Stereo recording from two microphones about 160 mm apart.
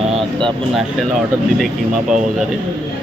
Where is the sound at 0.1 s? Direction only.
30° right (ahead or behind).